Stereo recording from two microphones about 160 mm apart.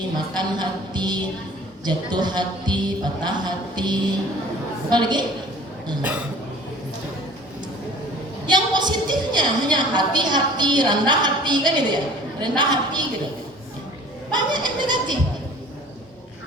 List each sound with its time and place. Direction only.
0.3 s speech: 25° right (ahead or behind)
6.0 s speech: 10° right (ahead or behind)
8.4 s a woman's voice: 25° right (ahead or behind)
14.3 s a sound: 25° right (ahead or behind)